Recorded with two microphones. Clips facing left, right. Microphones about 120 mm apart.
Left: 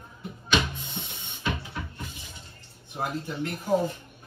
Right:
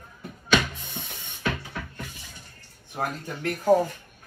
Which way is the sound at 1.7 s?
55° right (ahead or behind).